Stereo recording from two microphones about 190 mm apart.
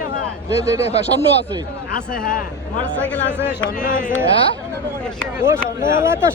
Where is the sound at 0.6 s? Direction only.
35° left (ahead or behind).